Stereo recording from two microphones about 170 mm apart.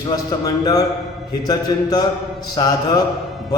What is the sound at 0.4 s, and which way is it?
A man's voice, 20° left (ahead or behind).